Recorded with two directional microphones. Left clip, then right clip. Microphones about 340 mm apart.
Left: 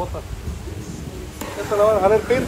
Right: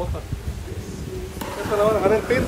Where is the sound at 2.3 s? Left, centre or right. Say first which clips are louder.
Left 2 dB; centre.